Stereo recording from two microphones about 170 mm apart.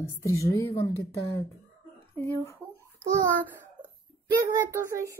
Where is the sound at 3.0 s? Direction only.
10° right (ahead or behind).